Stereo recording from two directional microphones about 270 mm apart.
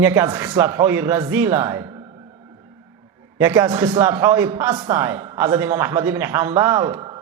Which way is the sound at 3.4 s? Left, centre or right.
Centre.